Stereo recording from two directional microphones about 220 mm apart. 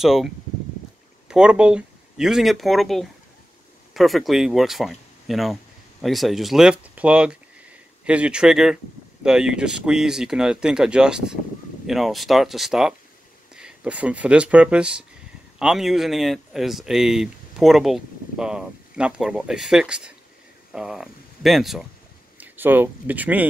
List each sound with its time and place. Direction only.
0.0 s speech: centre (ahead or behind)
1.3 s speech: 5° right (ahead or behind)